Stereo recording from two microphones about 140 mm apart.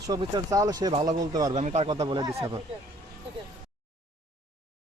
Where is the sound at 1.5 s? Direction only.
50° right (ahead or behind).